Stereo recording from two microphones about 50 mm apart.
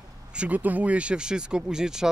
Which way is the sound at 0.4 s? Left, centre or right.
Right.